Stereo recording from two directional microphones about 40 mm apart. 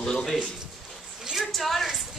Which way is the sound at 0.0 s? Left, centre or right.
Centre.